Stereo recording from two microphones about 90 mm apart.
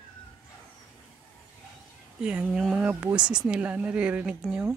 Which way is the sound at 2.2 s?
10° right (ahead or behind).